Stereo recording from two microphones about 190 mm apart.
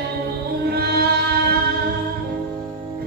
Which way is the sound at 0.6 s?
55° right (ahead or behind).